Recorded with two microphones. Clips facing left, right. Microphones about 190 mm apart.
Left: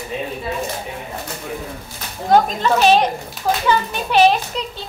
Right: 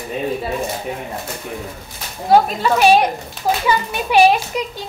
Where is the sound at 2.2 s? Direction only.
10° right (ahead or behind).